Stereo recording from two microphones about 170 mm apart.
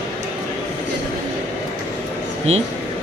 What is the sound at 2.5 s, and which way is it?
Speech, 40° right (ahead or behind).